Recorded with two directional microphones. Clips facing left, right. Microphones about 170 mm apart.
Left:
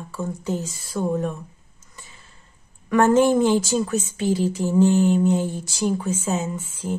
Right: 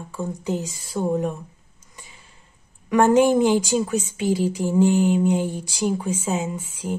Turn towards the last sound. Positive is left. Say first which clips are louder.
# even
turn(degrees=-10)  # may be behind; listen again after turning